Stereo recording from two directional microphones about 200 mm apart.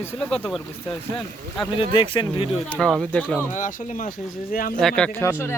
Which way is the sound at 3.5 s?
40° left (ahead or behind).